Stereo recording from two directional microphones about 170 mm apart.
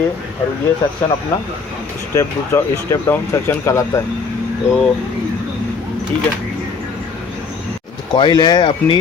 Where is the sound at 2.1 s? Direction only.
15° left (ahead or behind).